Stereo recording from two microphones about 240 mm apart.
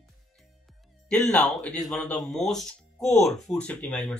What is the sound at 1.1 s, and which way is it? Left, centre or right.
Speech, centre.